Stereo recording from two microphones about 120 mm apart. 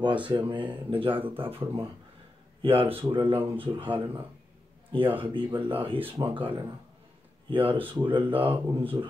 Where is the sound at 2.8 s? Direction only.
15° right (ahead or behind).